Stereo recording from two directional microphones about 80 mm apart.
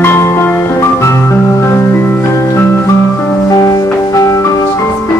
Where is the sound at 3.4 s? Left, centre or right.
Left.